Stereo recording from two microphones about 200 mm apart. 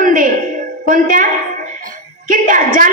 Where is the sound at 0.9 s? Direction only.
40° right (ahead or behind).